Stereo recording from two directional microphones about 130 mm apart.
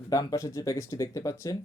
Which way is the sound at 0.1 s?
25° left (ahead or behind).